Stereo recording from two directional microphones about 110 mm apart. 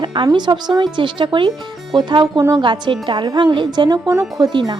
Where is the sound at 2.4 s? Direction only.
25° right (ahead or behind).